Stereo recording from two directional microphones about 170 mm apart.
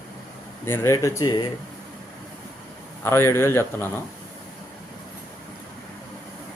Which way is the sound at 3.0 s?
15° left (ahead or behind).